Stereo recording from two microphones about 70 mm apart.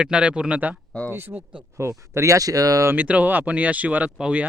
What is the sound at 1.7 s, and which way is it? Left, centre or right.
Speech, right.